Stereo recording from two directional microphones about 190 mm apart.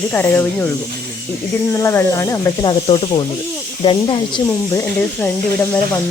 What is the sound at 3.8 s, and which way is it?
Speech, 25° left (ahead or behind).